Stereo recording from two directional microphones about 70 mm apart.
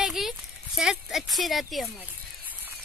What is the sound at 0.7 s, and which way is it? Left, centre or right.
Speech, centre.